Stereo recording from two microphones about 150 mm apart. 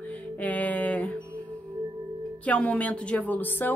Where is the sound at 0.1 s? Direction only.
10° left (ahead or behind).